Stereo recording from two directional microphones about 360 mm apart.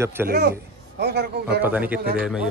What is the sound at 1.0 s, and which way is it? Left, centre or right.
Speech, right.